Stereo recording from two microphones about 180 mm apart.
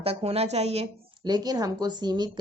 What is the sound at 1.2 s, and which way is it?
A woman's voice, 20° right (ahead or behind).